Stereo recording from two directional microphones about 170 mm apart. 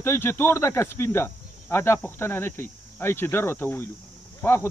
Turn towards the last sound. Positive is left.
turn(degrees=15)  # may be behind; listen again after turning